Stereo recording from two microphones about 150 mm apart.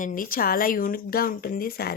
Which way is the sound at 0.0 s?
65° left (ahead or behind).